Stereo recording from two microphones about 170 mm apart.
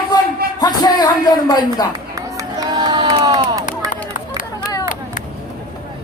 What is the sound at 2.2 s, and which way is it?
Crowd, 20° right (ahead or behind).